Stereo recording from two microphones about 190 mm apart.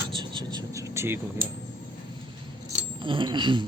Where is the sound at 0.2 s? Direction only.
25° right (ahead or behind).